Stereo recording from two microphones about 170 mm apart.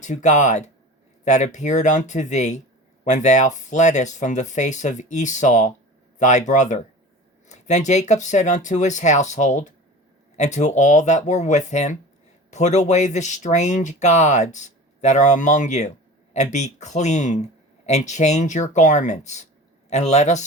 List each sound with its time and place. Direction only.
0.0 s speech: 45° left (ahead or behind)